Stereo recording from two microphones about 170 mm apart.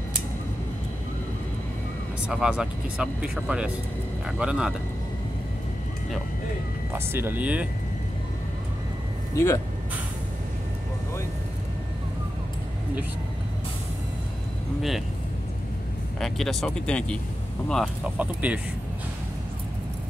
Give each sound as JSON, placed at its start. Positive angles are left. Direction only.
{"t": 2.2, "sound": "speech", "side_deg": -5}
{"t": 6.9, "sound": "speech", "side_deg": -15}
{"t": 9.3, "sound": "speech", "side_deg": 15}
{"t": 14.8, "sound": "speech", "side_deg": 0}
{"t": 16.2, "sound": "speech", "side_deg": 0}
{"t": 18.2, "sound": "speech", "side_deg": -10}